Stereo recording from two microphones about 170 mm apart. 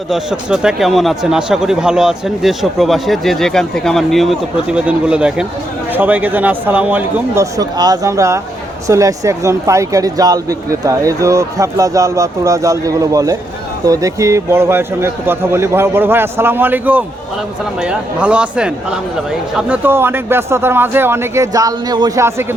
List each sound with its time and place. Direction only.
0.1 s a man's voice: 5° right (ahead or behind)